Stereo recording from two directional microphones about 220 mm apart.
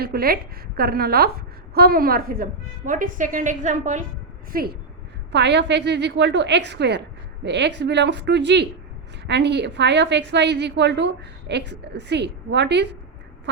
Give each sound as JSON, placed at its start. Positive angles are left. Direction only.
{"t": 0.0, "sound": "a woman's voice", "side_deg": -45}
{"t": 5.3, "sound": "a woman's voice", "side_deg": -50}